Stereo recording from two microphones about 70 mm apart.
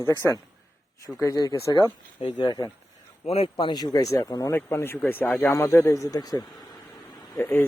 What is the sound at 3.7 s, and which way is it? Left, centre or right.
Speech, left.